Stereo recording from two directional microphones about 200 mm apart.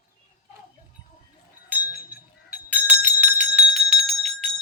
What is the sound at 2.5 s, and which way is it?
Bell, 5° right (ahead or behind).